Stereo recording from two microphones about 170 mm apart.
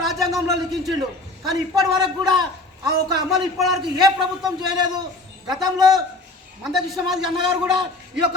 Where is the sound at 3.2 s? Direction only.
Centre (ahead or behind).